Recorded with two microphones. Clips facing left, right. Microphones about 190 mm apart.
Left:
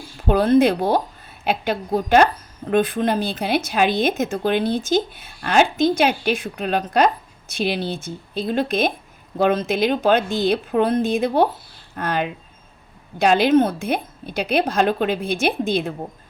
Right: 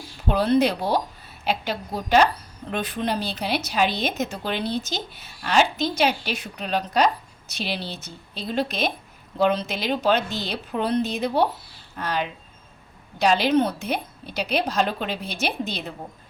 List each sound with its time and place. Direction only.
0.3 s a woman's voice: 50° left (ahead or behind)